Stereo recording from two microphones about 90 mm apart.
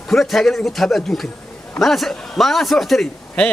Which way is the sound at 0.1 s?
5° left (ahead or behind).